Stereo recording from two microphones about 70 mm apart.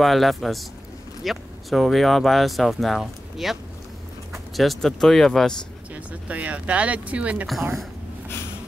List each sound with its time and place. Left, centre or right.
0.0 s speech: centre
6.2 s speech: centre